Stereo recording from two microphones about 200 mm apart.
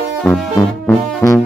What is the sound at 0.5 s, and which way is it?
Music, 15° left (ahead or behind).